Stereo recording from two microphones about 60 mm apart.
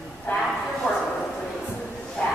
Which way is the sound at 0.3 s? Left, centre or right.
Left.